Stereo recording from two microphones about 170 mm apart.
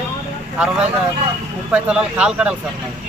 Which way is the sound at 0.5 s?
5° right (ahead or behind).